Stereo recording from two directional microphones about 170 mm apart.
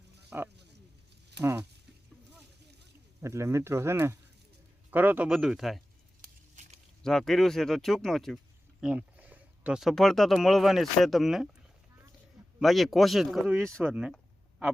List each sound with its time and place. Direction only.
0.3 s speech: 10° right (ahead or behind)
3.2 s speech: 15° right (ahead or behind); by 5.8 s centre (ahead or behind)
6.6 s a sound: 45° right (ahead or behind)
7.0 s speech: 5° left (ahead or behind)
12.5 s speech: centre (ahead or behind)